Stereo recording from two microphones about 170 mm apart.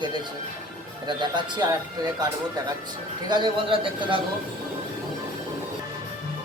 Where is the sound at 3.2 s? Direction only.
25° right (ahead or behind).